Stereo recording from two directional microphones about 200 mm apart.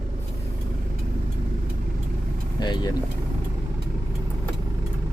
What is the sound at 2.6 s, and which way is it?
Speech, 20° left (ahead or behind).